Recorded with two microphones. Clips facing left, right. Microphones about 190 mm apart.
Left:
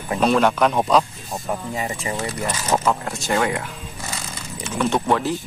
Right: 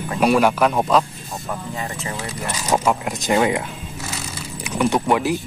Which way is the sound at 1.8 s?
10° left (ahead or behind).